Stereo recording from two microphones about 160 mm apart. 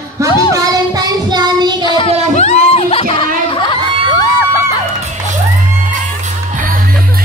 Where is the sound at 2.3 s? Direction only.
40° left (ahead or behind).